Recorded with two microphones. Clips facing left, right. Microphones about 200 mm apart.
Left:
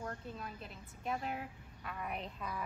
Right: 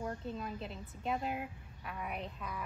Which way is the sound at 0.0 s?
20° right (ahead or behind).